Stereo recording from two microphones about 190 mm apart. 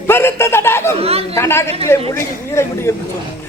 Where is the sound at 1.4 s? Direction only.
15° left (ahead or behind).